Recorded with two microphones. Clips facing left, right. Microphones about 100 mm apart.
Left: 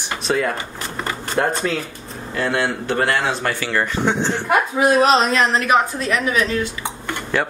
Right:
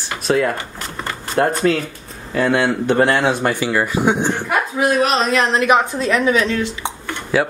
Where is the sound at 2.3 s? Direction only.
15° right (ahead or behind).